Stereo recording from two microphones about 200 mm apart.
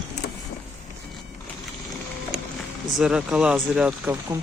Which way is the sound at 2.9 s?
5° right (ahead or behind).